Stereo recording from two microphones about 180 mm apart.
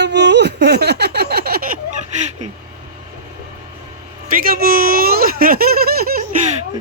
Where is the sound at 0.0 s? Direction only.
70° right (ahead or behind).